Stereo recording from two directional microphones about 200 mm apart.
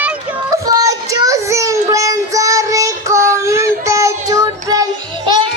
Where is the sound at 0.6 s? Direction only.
15° right (ahead or behind).